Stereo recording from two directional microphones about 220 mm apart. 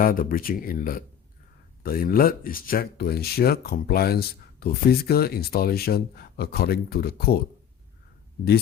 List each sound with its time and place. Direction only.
0.0 s speech: 40° left (ahead or behind)